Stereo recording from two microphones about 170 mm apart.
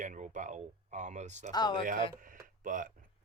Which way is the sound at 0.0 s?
45° right (ahead or behind).